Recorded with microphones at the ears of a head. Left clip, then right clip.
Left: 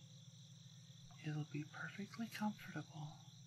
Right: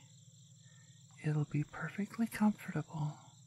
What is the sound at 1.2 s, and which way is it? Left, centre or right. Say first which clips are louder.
Speech: right 9 dB; right.